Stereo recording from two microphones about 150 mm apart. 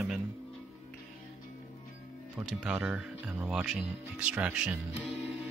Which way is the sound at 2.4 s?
5° right (ahead or behind).